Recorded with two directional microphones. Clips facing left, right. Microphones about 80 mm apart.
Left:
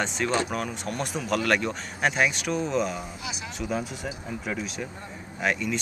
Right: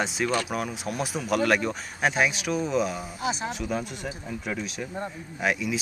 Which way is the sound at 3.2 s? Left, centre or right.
Right.